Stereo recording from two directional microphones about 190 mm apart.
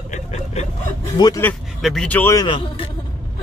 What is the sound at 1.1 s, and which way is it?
Speech, 20° left (ahead or behind).